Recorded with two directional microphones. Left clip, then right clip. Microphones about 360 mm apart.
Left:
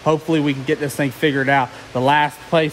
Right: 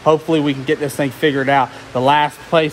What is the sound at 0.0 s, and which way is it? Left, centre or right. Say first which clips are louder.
Speech: right 4 dB; centre.